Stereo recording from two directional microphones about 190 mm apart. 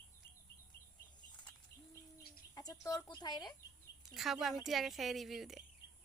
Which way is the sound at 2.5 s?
20° left (ahead or behind).